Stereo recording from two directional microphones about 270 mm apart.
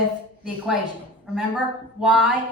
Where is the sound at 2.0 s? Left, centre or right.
Centre.